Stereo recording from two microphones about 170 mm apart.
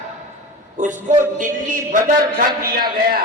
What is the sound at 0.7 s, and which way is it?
A man's voice, 45° right (ahead or behind).